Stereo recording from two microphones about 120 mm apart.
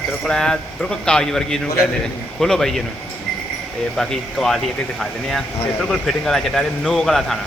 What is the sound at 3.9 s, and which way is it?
A man's voice, 5° left (ahead or behind).